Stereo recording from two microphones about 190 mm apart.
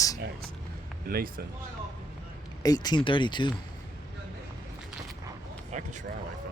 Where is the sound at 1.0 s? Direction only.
50° right (ahead or behind).